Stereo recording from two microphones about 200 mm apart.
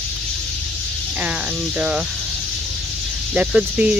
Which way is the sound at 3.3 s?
5° right (ahead or behind).